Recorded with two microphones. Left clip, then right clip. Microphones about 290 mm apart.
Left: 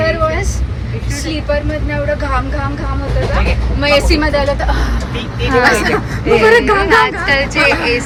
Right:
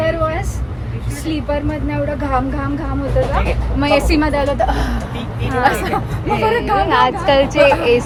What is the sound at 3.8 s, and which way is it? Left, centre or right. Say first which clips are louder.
Speech: left 3 dB; right.